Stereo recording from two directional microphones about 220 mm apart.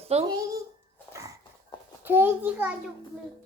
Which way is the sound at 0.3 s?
15° right (ahead or behind).